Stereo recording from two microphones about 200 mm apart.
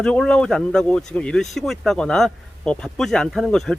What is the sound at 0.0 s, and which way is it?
Speech, 5° left (ahead or behind).